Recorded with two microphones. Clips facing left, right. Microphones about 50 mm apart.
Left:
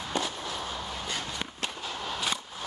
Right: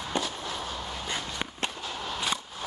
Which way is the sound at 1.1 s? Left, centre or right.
Right.